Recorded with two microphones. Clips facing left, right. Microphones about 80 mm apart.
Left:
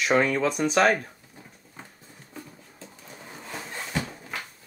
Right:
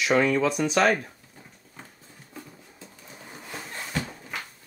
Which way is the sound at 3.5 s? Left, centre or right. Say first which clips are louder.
Left 1 dB; centre.